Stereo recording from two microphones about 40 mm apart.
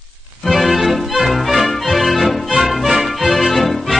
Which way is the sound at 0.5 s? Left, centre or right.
Centre.